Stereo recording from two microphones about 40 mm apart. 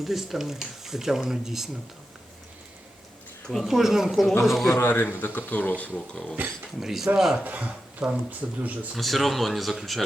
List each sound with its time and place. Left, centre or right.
0.0 s speech: centre
3.6 s speech: centre
4.7 s speech: left
5.2 s speech: left
6.4 s speech: right
6.7 s speech: centre
7.4 s speech: right
9.0 s speech: centre